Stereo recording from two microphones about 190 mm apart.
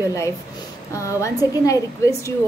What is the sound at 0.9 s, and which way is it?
A woman's voice, 15° left (ahead or behind).